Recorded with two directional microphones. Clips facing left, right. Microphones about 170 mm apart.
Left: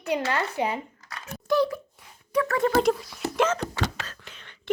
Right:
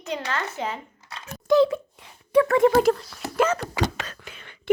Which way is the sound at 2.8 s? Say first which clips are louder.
Right 2 dB; centre (ahead or behind).